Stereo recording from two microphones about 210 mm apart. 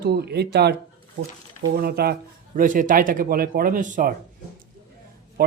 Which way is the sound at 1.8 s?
50° right (ahead or behind).